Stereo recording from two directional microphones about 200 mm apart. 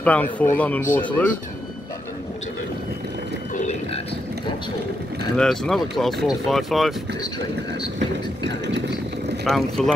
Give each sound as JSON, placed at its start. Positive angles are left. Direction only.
{"t": 0.0, "sound": "speech", "side_deg": 5}
{"t": 3.5, "sound": "a sound", "side_deg": 35}
{"t": 5.3, "sound": "speech", "side_deg": 0}
{"t": 9.4, "sound": "speech", "side_deg": 0}